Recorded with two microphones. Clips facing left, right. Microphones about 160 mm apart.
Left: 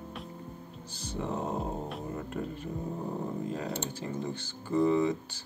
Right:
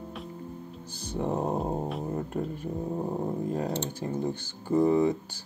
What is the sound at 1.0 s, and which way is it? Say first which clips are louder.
Music: right 5 dB; 50° right (ahead or behind).